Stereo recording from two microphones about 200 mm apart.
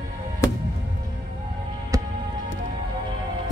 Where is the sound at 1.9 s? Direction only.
15° right (ahead or behind).